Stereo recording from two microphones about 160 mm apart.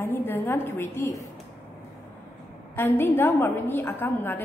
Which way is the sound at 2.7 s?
15° left (ahead or behind).